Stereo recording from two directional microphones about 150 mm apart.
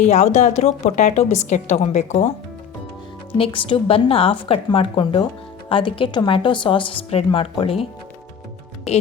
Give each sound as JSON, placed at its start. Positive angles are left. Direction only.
{"t": 0.0, "sound": "a woman's voice", "side_deg": 50}
{"t": 3.3, "sound": "speech", "side_deg": 35}